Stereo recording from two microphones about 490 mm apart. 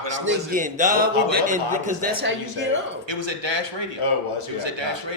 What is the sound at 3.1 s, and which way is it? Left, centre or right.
A man's voice, right.